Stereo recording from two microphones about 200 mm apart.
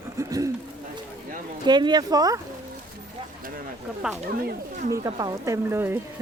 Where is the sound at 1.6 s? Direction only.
20° right (ahead or behind).